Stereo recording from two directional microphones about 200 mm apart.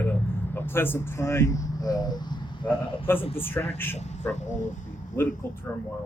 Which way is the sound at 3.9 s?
35° left (ahead or behind).